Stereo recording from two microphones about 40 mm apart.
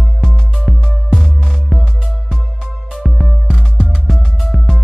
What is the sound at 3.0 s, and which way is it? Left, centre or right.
Music, centre.